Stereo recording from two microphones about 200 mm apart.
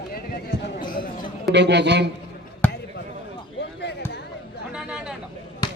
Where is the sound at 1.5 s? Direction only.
60° right (ahead or behind).